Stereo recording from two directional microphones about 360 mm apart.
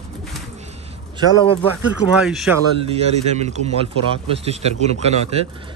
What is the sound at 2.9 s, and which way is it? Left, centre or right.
Speech, centre.